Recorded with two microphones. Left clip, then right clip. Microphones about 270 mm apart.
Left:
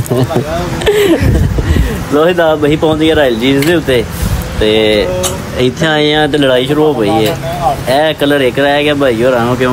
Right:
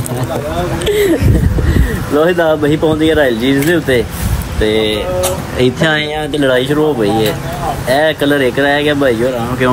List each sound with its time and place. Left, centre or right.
2.1 s speech: centre
4.7 s speech: left
5.6 s speech: centre